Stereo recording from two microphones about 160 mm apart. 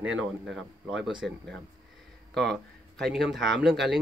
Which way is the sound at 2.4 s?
Centre (ahead or behind).